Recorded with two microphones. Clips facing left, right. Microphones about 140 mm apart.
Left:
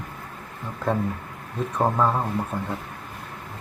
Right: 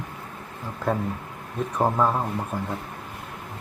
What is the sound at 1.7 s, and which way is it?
Speech, centre (ahead or behind).